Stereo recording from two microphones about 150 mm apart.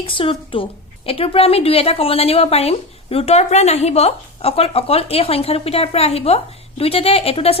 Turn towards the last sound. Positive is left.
turn(degrees=40)  # may be behind; listen again after turning